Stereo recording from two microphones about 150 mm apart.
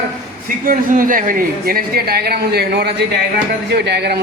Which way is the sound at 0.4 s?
70° right (ahead or behind).